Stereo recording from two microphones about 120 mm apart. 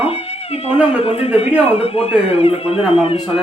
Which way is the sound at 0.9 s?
55° left (ahead or behind).